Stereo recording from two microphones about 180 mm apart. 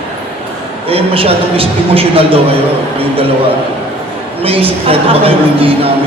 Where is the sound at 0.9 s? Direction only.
30° right (ahead or behind).